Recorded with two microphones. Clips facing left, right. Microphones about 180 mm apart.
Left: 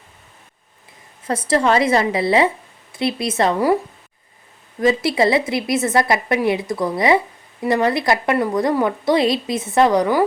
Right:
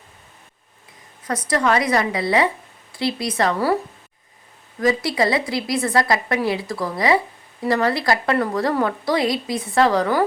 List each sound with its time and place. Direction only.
1.2 s a woman's voice: 25° left (ahead or behind)
4.8 s a woman's voice: 25° left (ahead or behind)